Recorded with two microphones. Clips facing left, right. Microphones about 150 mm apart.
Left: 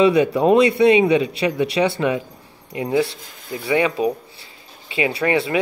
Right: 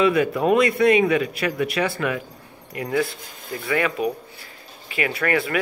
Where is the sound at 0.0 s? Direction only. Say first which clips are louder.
Left 4 dB; 25° left (ahead or behind).